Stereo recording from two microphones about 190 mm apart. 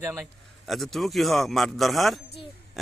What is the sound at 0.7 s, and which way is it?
A man's voice, centre (ahead or behind).